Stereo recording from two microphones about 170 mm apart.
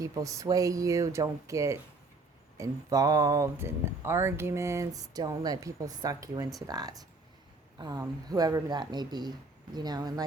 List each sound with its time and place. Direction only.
0.0 s speech: 20° right (ahead or behind)